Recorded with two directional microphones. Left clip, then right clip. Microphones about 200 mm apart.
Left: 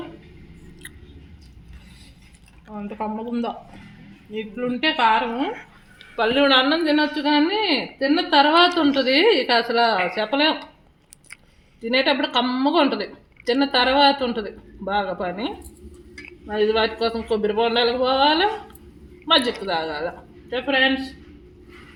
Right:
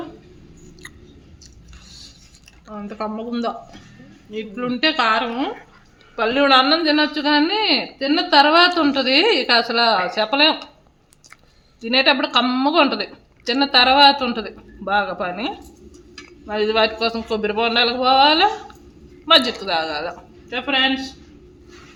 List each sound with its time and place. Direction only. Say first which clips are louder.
2.7 s a woman's voice: right 1 dB; 25° right (ahead or behind)
11.8 s a woman's voice: right 3 dB; 20° right (ahead or behind)